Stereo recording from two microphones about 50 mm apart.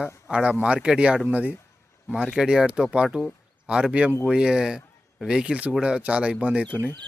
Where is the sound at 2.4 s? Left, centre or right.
Centre.